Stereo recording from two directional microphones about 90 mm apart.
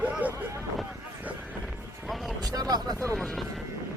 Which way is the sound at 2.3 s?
45° right (ahead or behind).